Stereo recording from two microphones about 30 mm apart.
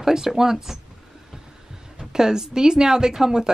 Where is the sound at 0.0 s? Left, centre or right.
Centre.